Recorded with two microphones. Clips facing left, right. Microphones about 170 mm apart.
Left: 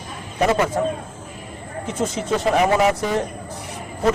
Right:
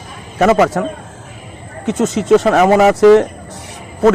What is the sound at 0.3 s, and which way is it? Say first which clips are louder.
Speech: right 7 dB; 90° right.